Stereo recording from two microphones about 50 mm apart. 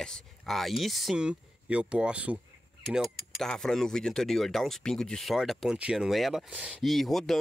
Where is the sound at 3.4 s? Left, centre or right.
Centre.